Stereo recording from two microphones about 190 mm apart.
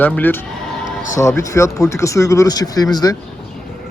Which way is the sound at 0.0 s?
10° left (ahead or behind).